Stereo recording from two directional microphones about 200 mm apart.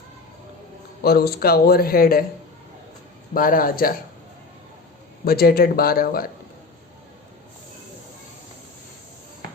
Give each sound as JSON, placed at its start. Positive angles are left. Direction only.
{"t": 1.0, "sound": "speech", "side_deg": 50}
{"t": 3.3, "sound": "speech", "side_deg": 45}
{"t": 5.2, "sound": "speech", "side_deg": 50}